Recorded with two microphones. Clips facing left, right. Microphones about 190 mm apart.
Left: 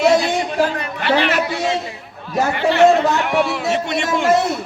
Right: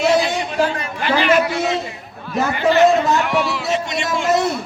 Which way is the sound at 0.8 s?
65° left (ahead or behind).